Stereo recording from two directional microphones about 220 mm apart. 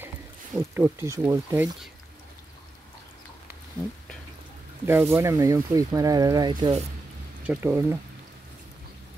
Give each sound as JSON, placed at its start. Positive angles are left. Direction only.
{"t": 0.6, "sound": "speech", "side_deg": -10}
{"t": 4.8, "sound": "speech", "side_deg": -10}